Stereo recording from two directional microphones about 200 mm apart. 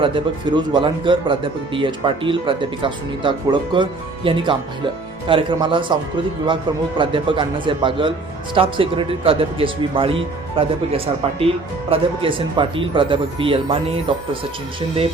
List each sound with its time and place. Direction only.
0.0 s speech: 25° right (ahead or behind)